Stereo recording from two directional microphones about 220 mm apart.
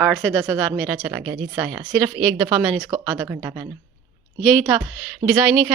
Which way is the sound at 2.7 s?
10° right (ahead or behind).